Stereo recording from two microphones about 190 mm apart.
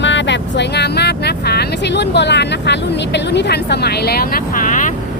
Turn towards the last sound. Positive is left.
turn(degrees=45)  # may be behind; listen again after turning